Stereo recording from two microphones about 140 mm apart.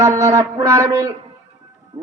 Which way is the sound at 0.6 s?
25° right (ahead or behind).